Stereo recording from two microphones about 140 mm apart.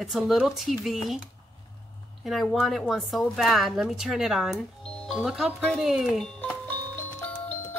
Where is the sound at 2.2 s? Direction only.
Centre (ahead or behind).